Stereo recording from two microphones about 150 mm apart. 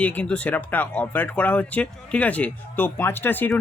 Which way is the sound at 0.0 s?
10° left (ahead or behind).